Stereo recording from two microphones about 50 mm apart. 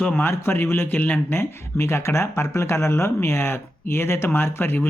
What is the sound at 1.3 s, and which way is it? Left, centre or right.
Speech, left.